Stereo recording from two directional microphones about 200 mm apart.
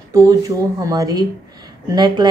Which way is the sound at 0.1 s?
15° right (ahead or behind).